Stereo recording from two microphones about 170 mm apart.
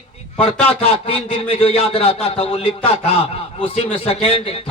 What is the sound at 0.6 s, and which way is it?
A man's voice, 35° left (ahead or behind).